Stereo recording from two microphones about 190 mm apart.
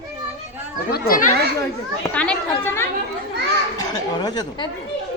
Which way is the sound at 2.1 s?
5° left (ahead or behind).